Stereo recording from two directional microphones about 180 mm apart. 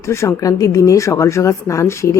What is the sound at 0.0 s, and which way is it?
Speech, 15° left (ahead or behind).